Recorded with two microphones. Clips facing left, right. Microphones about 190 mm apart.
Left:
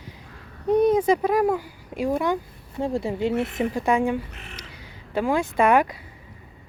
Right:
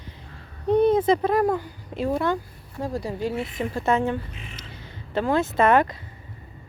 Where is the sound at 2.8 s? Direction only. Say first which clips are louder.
Left 3 dB; 25° left (ahead or behind).